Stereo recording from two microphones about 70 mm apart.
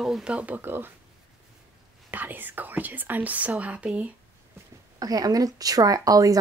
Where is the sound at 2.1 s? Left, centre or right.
Right.